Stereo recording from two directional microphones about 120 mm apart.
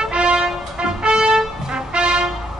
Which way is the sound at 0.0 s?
10° right (ahead or behind).